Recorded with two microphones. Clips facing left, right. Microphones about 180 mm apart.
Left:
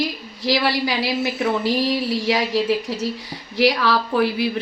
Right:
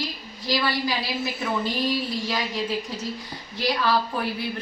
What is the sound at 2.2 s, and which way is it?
A woman's voice, 85° left.